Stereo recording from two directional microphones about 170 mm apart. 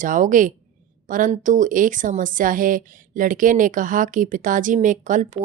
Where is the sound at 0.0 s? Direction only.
50° right (ahead or behind).